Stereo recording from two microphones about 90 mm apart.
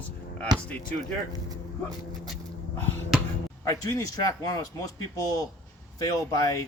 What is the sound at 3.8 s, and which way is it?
Speech, 40° left (ahead or behind).